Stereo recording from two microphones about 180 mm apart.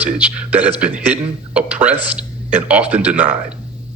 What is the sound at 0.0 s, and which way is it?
A man's voice, 10° right (ahead or behind).